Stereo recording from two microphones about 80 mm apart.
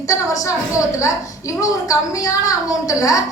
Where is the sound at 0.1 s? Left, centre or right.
Left.